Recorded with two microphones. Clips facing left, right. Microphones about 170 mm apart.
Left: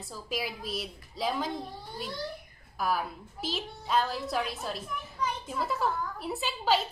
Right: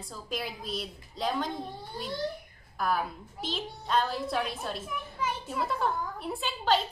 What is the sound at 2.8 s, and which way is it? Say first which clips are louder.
A woman's voice: right 1 dB; 5° left (ahead or behind).